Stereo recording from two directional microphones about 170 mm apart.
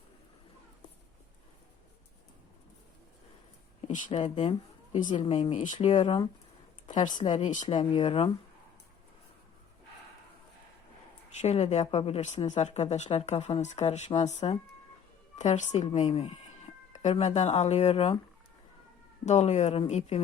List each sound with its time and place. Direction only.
3.8 s speech: 40° left (ahead or behind)
5.0 s speech: 30° left (ahead or behind)
5.4 s speech: 40° left (ahead or behind)
7.7 s speech: 35° left (ahead or behind)
11.3 s speech: 40° left (ahead or behind)
19.2 s speech: 40° left (ahead or behind)